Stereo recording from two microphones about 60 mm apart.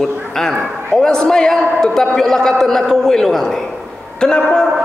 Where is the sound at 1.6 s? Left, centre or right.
Centre.